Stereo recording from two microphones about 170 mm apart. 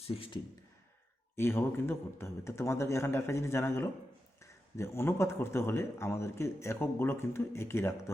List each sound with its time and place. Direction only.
0.1 s speech: 30° left (ahead or behind)
1.4 s speech: 15° left (ahead or behind)